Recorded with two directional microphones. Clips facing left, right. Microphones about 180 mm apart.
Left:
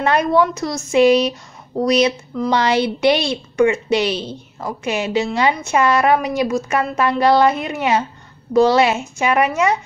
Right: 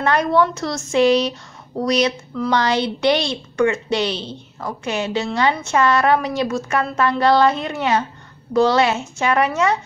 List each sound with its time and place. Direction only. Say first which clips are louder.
0.0 s a woman's voice: left 1 dB; 20° left (ahead or behind)